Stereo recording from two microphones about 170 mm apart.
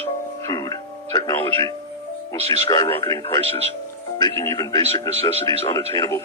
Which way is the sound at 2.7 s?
20° left (ahead or behind).